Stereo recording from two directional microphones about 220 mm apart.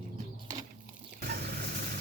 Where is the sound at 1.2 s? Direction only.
45° right (ahead or behind).